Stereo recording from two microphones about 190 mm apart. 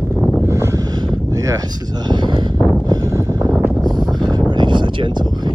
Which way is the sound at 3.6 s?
10° right (ahead or behind).